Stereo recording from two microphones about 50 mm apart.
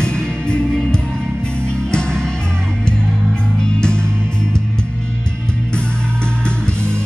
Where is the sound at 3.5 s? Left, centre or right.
Centre.